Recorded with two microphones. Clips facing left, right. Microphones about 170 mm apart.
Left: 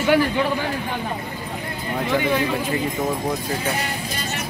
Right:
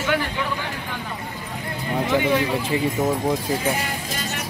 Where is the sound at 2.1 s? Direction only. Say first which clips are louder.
Right 1 dB; 10° right (ahead or behind).